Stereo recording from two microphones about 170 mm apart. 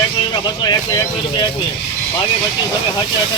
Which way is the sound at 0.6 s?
25° left (ahead or behind).